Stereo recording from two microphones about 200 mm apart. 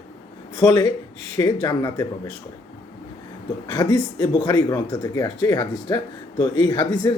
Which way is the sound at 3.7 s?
20° left (ahead or behind).